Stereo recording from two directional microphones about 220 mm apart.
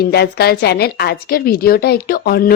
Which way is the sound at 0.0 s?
45° left (ahead or behind).